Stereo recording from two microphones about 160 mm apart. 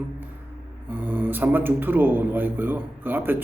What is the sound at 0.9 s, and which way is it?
A man's voice, 10° right (ahead or behind).